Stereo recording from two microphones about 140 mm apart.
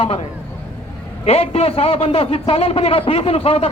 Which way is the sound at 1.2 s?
45° left (ahead or behind).